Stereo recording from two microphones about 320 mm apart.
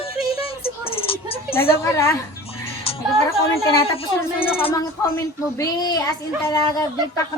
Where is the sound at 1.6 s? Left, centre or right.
Centre.